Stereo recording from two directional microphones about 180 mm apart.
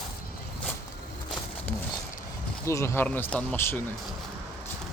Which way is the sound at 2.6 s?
15° left (ahead or behind).